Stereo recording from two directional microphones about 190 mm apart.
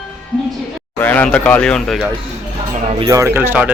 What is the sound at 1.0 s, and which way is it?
Speech, 10° left (ahead or behind).